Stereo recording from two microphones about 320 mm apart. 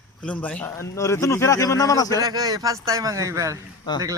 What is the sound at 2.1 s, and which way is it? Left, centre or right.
Speech, centre.